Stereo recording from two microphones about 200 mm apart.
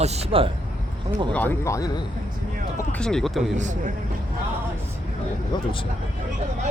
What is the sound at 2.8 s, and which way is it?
Speech, 5° left (ahead or behind).